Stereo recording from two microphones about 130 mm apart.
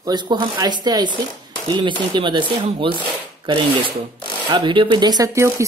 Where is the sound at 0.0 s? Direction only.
35° right (ahead or behind).